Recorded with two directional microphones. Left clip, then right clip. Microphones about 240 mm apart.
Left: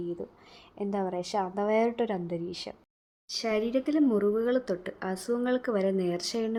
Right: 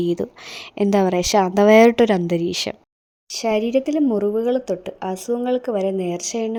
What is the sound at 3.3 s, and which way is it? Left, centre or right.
A woman's voice, right.